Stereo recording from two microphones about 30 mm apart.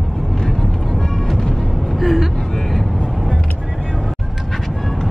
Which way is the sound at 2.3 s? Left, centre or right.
Centre.